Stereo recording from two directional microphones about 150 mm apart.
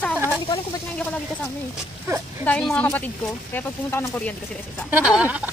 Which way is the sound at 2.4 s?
10° left (ahead or behind).